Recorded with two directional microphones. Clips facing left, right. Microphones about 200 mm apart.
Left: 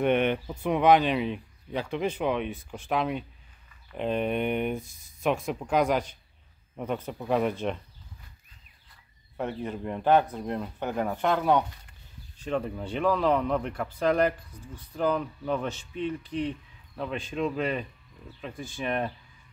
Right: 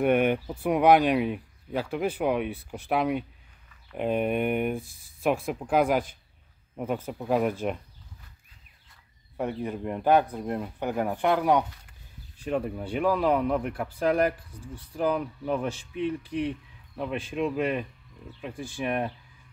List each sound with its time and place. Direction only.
0.0 s speech: 10° right (ahead or behind)
9.4 s speech: 10° right (ahead or behind)